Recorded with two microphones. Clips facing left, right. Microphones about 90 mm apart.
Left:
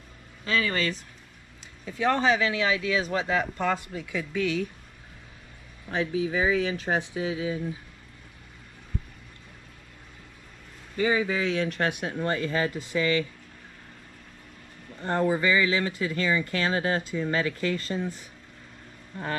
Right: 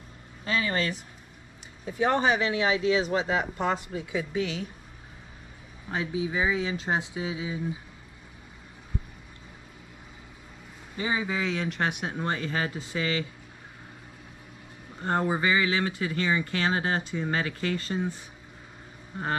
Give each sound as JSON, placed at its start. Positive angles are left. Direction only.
{"t": 0.6, "sound": "speech", "side_deg": -25}
{"t": 5.9, "sound": "speech", "side_deg": -20}
{"t": 11.0, "sound": "speech", "side_deg": -25}
{"t": 15.1, "sound": "speech", "side_deg": -25}